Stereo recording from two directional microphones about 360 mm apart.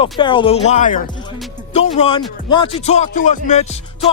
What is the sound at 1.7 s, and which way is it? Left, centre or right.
Music, centre.